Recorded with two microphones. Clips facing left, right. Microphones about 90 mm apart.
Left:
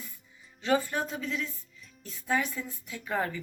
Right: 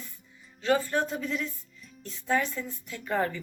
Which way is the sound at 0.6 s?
15° left (ahead or behind).